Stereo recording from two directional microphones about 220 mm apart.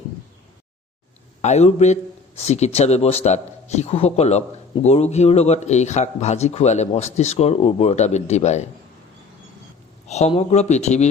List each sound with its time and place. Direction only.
1.4 s a man's voice: 30° left (ahead or behind)
10.1 s speech: 30° left (ahead or behind)